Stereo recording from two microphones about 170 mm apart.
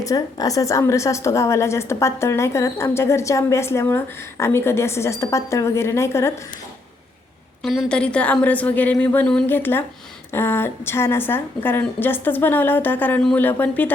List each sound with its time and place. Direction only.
0.0 s a woman's voice: 20° left (ahead or behind)
7.6 s a woman's voice: centre (ahead or behind)